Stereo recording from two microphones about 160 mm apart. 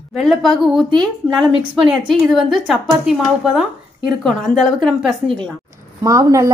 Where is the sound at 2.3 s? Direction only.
Centre (ahead or behind).